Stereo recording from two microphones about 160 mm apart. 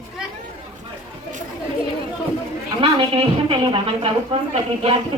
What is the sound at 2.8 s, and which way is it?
A woman's voice, 30° right (ahead or behind).